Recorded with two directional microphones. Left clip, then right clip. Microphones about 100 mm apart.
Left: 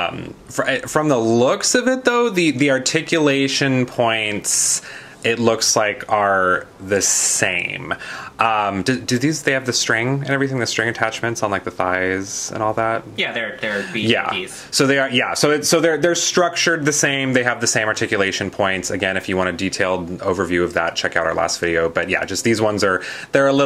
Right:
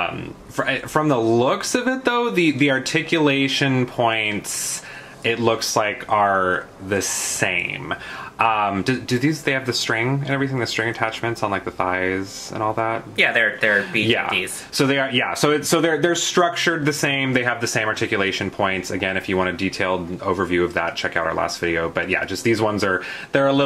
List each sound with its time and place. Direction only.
0.6 s speech: 35° left (ahead or behind)
13.2 s speech: 25° right (ahead or behind)
14.0 s speech: 35° left (ahead or behind)
16.8 s speech: 40° left (ahead or behind)